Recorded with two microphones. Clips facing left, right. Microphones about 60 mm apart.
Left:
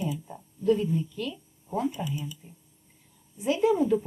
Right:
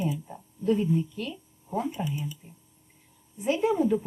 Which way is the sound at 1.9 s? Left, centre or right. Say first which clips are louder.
Right 1 dB; right.